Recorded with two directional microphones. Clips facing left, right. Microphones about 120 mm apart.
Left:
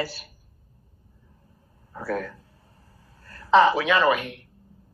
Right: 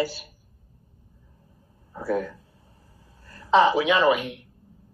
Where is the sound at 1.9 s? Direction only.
25° right (ahead or behind).